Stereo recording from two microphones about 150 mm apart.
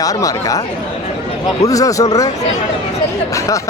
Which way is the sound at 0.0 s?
25° left (ahead or behind).